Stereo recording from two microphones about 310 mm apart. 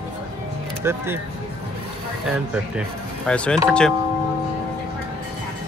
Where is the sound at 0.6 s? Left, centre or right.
Centre.